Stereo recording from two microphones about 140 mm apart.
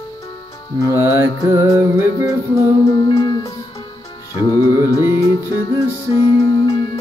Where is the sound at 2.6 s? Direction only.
30° left (ahead or behind).